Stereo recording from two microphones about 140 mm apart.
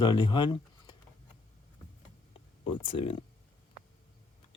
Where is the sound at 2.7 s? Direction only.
40° left (ahead or behind).